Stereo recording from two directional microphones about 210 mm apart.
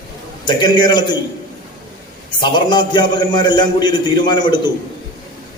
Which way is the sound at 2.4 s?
20° left (ahead or behind).